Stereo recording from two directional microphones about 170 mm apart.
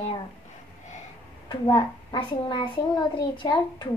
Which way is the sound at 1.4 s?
30° left (ahead or behind).